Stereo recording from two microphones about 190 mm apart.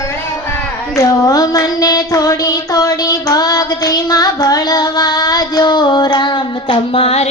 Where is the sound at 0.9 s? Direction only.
20° left (ahead or behind).